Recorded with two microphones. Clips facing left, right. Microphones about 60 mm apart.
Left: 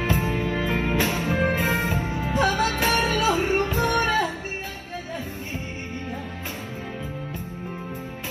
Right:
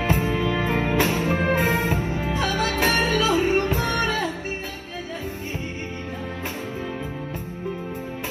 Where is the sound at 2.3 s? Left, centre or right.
Left.